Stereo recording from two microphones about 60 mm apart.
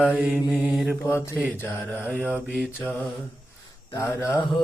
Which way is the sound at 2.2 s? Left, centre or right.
Right.